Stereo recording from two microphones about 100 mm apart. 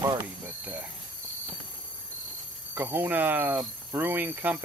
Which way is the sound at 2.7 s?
20° right (ahead or behind).